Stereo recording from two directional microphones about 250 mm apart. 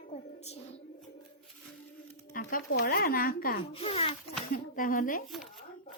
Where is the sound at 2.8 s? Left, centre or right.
Left.